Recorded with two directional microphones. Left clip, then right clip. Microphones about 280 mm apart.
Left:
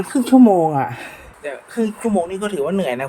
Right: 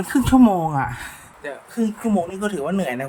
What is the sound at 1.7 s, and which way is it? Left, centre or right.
Speech, centre.